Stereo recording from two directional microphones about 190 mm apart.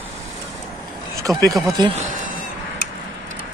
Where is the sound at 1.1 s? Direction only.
15° right (ahead or behind).